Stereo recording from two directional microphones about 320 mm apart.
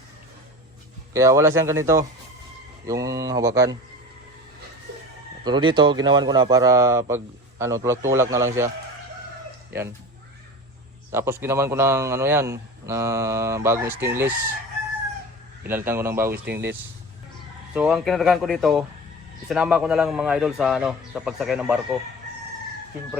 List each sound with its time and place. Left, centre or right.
1.1 s a man's voice: centre
5.5 s a man's voice: centre
11.1 s a man's voice: centre
15.7 s a man's voice: centre
16.3 s speech: right
17.7 s a man's voice: centre